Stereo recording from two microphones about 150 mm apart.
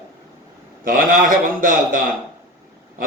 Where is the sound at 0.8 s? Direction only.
65° right (ahead or behind).